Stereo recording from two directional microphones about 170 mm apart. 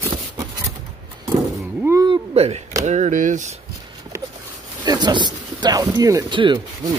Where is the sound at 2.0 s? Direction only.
35° right (ahead or behind).